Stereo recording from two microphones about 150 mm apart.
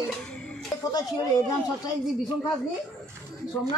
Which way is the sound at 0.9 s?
25° left (ahead or behind).